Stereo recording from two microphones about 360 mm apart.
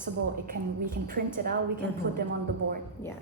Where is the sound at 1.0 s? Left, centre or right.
Right.